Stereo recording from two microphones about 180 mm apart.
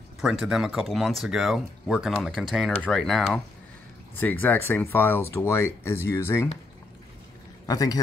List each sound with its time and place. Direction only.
0.2 s speech: centre (ahead or behind); by 6.5 s 15° left (ahead or behind)
7.6 s a man's voice: 20° left (ahead or behind)